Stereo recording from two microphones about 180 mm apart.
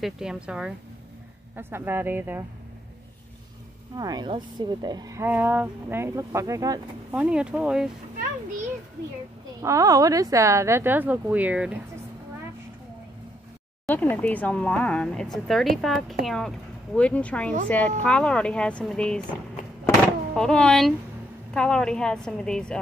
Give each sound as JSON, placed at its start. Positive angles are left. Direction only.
{"t": 0.0, "sound": "speech", "side_deg": -5}
{"t": 3.9, "sound": "speech", "side_deg": -20}
{"t": 7.1, "sound": "speech", "side_deg": -5}
{"t": 9.6, "sound": "speech", "side_deg": -20}
{"t": 13.8, "sound": "speech", "side_deg": 10}
{"t": 20.3, "sound": "speech", "side_deg": 5}